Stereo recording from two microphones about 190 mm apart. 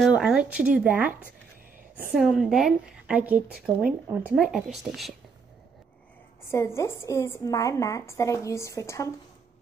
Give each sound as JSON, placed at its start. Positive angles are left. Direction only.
{"t": 0.0, "sound": "speech", "side_deg": -5}
{"t": 2.1, "sound": "a woman's voice", "side_deg": 0}
{"t": 6.5, "sound": "a woman's voice", "side_deg": 15}